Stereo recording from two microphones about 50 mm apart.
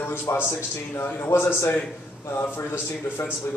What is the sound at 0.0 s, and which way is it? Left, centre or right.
A man's voice, left.